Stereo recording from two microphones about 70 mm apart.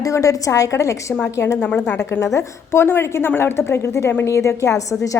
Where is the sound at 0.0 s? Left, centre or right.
Left.